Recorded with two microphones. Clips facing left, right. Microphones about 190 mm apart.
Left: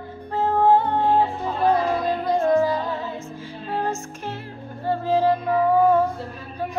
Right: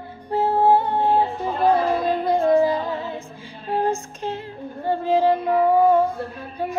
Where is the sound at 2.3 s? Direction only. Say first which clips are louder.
Right 2 dB; 15° right (ahead or behind).